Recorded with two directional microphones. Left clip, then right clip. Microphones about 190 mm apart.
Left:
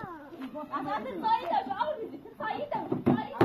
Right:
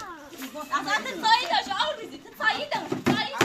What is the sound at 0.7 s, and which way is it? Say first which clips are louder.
Speech: right 8 dB; 20° right (ahead or behind).